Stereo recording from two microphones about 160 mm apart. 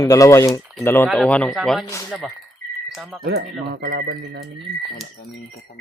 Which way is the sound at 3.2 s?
85° right.